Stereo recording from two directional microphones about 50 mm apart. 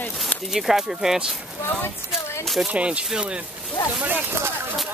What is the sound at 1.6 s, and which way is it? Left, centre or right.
Speech, left.